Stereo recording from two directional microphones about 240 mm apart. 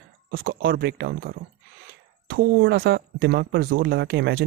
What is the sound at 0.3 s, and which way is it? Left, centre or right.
Speech, right.